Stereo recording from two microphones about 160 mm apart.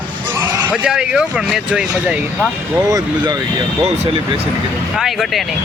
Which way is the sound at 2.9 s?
25° right (ahead or behind).